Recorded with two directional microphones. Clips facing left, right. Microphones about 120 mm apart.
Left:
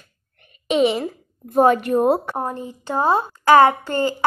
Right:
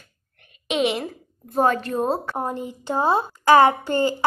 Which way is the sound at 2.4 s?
20° right (ahead or behind).